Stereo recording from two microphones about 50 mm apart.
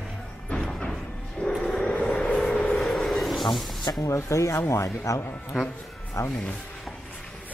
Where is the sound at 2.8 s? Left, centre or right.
Centre.